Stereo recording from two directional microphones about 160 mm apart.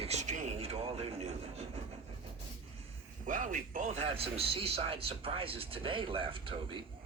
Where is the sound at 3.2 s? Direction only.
55° right (ahead or behind).